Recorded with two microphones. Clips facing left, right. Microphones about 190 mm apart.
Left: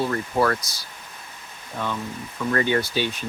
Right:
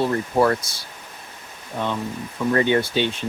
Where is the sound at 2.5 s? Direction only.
25° right (ahead or behind).